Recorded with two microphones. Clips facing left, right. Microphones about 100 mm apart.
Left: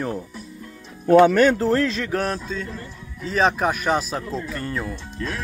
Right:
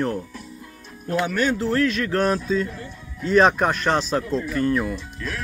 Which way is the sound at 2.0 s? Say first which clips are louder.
Right 4 dB; centre (ahead or behind).